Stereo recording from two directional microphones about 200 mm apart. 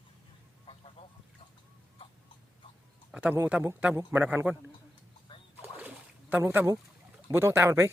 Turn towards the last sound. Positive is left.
turn(degrees=-15)  # may be behind; listen again after turning